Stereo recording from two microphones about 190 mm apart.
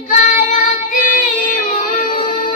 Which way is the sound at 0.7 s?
45° left (ahead or behind).